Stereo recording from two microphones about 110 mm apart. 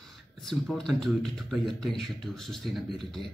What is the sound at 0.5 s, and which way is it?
Speech, 5° left (ahead or behind).